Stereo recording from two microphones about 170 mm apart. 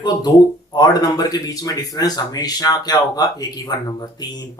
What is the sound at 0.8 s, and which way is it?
Speech, 20° left (ahead or behind).